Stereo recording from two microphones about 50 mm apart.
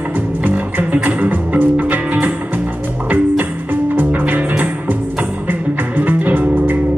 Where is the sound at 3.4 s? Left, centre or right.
Right.